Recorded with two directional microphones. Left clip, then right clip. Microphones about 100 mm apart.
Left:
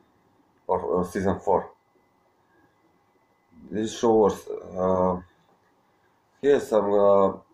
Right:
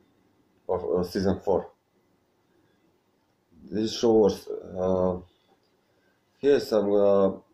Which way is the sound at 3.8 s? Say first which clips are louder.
Left 1 dB; 30° right (ahead or behind).